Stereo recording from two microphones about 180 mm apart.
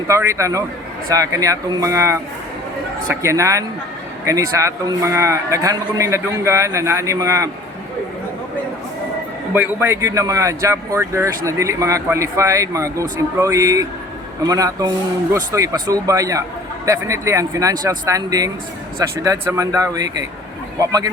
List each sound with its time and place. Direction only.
0.1 s speech: 15° right (ahead or behind)
9.6 s speech: 15° right (ahead or behind)